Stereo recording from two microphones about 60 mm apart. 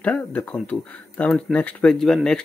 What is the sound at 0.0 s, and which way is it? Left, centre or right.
Speech, left.